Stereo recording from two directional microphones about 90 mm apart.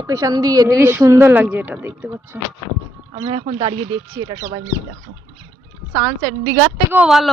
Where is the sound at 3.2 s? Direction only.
85° right.